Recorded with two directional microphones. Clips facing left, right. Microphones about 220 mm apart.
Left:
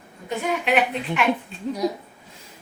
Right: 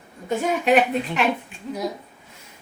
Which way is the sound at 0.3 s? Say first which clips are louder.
Right 4 dB; 45° right (ahead or behind).